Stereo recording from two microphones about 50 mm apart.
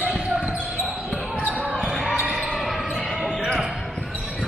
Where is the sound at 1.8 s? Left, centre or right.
Centre.